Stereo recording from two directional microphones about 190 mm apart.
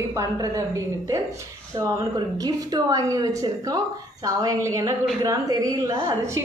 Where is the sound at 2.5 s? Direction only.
20° right (ahead or behind).